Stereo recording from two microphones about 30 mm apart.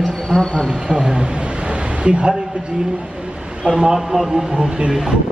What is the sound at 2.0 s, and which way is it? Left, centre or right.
Speech, right.